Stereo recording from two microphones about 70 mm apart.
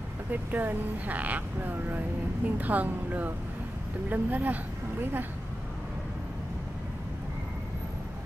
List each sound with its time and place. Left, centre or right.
0.3 s speech: right